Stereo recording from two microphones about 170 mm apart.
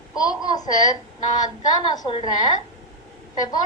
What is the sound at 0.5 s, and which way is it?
Speech, 20° left (ahead or behind).